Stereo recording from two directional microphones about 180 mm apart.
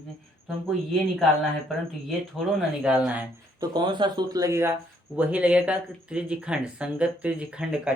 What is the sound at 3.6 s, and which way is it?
Speech, 25° right (ahead or behind).